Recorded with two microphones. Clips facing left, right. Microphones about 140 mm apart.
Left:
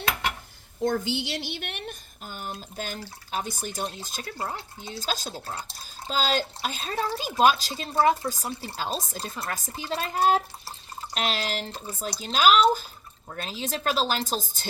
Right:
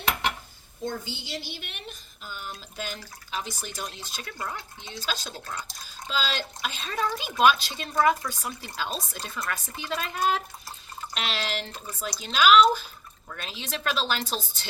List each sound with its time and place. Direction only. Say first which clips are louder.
0.9 s speech: left 7 dB; 80° left; by 5.3 s 45° left (ahead or behind)
5.5 s speech: left 1 dB; 30° left (ahead or behind)